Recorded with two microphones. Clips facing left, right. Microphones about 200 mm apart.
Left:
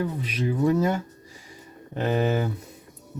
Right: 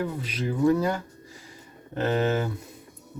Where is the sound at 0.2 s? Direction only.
20° left (ahead or behind).